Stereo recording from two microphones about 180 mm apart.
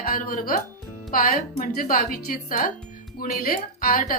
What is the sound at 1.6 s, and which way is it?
A woman's voice, 50° left (ahead or behind).